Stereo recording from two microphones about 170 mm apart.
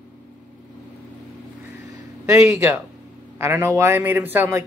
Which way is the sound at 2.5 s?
10° right (ahead or behind).